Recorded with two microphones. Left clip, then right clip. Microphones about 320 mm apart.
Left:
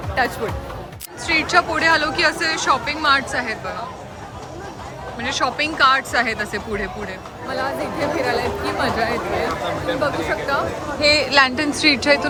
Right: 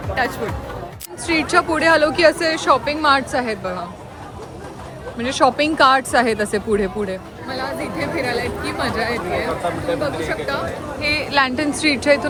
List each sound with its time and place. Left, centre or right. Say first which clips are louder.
0.1 s speech: even; centre
5.1 s speech: right 5 dB; centre